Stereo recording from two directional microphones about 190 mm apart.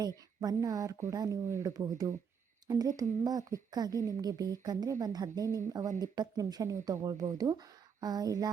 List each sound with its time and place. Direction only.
0.3 s speech: 20° right (ahead or behind)